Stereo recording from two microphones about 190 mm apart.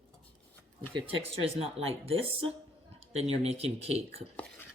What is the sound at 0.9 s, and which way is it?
Speech, 30° right (ahead or behind).